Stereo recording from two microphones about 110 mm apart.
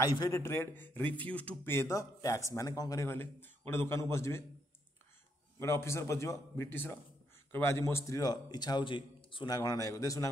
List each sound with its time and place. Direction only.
0.0 s a man's voice: 30° left (ahead or behind)
0.4 s speech: 20° left (ahead or behind)
3.1 s speech: 20° left (ahead or behind)
5.6 s a man's voice: 25° left (ahead or behind); by 9.5 s 50° left (ahead or behind)
9.5 s a man's voice: 35° left (ahead or behind)